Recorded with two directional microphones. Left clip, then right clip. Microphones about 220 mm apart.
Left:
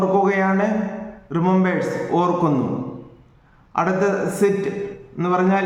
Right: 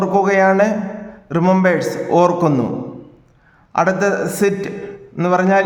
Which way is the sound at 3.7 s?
45° right (ahead or behind).